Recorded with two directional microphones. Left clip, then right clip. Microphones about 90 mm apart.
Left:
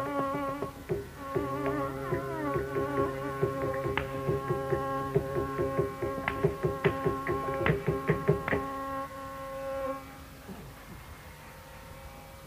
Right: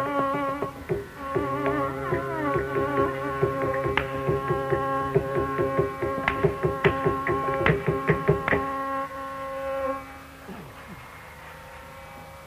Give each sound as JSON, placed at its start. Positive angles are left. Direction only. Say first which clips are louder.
{"t": 0.0, "sound": "music", "louder": "right 6 dB", "side_deg": -45}